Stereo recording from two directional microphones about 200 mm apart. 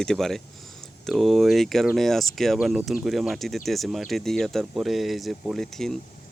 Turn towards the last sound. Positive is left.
turn(degrees=0)  # may be behind; listen again after turning